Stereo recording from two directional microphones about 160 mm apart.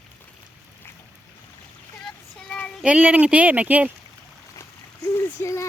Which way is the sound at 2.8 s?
10° right (ahead or behind).